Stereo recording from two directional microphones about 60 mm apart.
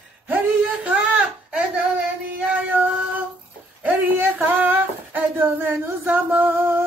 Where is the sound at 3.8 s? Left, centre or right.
Right.